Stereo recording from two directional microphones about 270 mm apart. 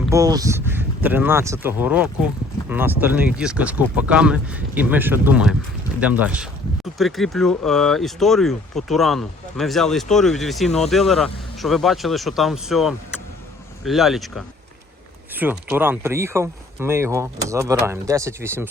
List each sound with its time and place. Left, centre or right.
0.1 s speech: centre